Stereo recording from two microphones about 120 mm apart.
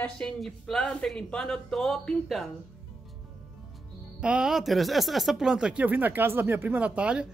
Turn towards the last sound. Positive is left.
turn(degrees=-10)  # may be behind; listen again after turning